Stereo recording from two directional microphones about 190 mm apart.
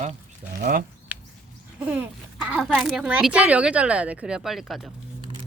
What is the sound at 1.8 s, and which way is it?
Speech, 5° right (ahead or behind).